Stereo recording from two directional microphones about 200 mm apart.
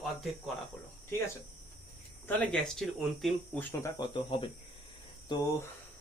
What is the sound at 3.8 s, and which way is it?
Speech, 25° left (ahead or behind).